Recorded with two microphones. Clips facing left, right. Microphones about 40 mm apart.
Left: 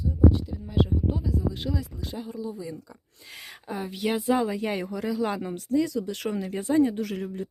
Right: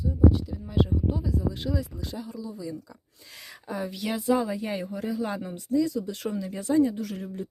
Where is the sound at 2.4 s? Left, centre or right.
Left.